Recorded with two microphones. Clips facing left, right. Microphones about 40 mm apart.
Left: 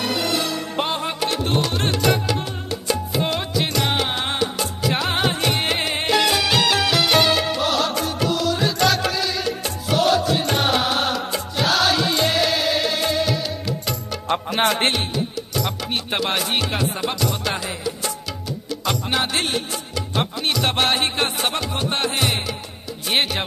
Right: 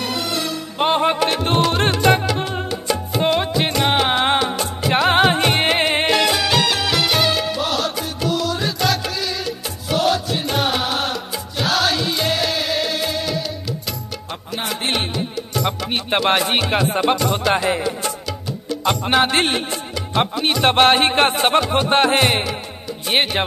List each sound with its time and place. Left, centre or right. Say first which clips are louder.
0.0 s music: left 1 dB; centre
0.8 s speech: right 13 dB; right
1.2 s music: right 4 dB; right
3.2 s music: right 7 dB; centre
6.1 s music: right 1 dB; centre
14.3 s music: left 7 dB; left
15.6 s speech: right 5 dB; right
17.1 s music: right 6 dB; right
18.9 s music: right 6 dB; right
20.2 s music: right 5 dB; right